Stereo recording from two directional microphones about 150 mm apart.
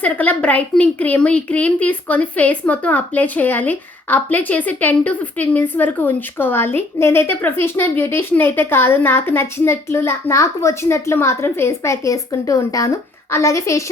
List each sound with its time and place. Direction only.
0.0 s a woman's voice: 10° left (ahead or behind)